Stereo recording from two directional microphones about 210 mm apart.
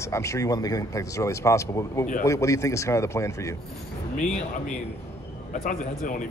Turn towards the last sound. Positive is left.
turn(degrees=40)  # may be behind; listen again after turning